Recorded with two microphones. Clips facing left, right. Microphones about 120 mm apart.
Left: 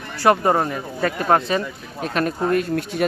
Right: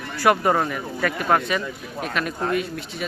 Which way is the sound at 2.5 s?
50° left (ahead or behind).